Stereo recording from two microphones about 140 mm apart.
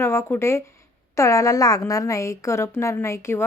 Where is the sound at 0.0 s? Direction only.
20° left (ahead or behind).